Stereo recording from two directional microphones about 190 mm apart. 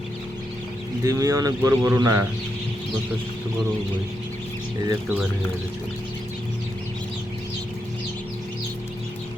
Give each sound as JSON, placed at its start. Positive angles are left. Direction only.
{"t": 1.0, "sound": "speech", "side_deg": -15}